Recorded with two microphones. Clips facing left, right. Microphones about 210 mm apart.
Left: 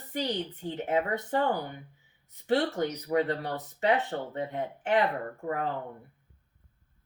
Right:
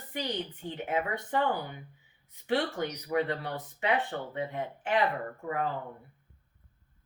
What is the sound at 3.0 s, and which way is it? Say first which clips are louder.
Speech: left 1 dB; 40° left (ahead or behind).